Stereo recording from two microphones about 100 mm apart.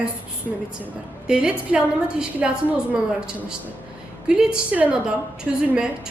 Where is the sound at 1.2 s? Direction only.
10° right (ahead or behind).